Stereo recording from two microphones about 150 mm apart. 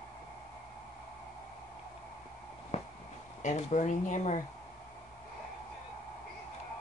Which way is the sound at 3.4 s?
50° left (ahead or behind).